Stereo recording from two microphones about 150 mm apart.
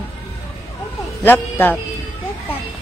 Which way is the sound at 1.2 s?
10° left (ahead or behind).